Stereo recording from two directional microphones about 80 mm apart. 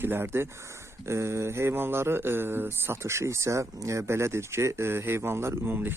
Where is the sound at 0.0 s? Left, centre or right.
Right.